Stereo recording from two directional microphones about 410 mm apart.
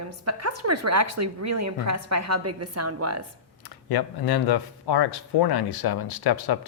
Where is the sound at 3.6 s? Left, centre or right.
Left.